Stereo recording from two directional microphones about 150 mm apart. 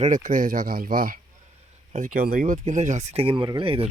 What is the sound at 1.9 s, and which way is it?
Speech, 60° right (ahead or behind).